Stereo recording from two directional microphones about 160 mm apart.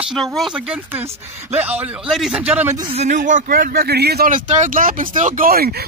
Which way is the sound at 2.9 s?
50° right (ahead or behind).